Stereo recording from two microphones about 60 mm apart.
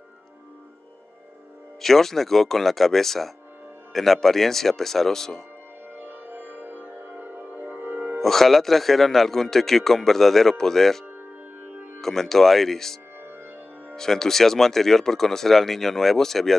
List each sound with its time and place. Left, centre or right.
1.8 s a man's voice: centre
5.9 s music: right
8.2 s a man's voice: centre
11.6 s music: right
12.0 s a man's voice: centre